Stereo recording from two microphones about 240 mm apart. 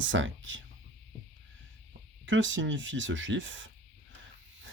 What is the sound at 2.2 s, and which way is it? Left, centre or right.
Speech, right.